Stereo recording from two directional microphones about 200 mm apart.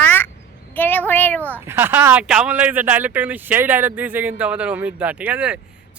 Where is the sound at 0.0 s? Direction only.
10° left (ahead or behind).